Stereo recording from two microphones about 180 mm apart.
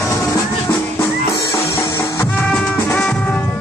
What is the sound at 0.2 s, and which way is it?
Music, 15° left (ahead or behind).